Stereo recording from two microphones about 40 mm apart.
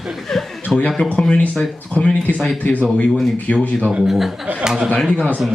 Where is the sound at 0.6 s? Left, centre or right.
Left.